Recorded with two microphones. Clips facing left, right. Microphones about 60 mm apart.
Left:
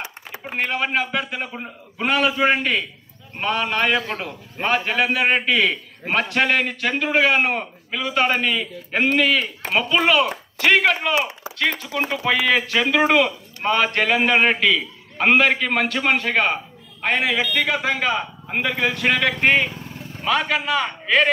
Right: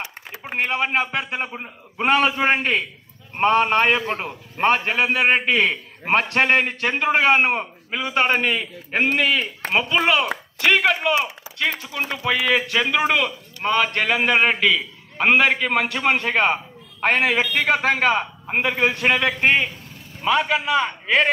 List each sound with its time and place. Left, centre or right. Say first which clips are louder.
0.6 s a man's voice: right 1 dB; right
10.6 s a man's voice: left 1 dB; centre
16.2 s a man's voice: right 1 dB; right
17.0 s a man's voice: right 2 dB; right
18.6 s a man's voice: right 2 dB; right
19.0 s a man's voice: left 1 dB; centre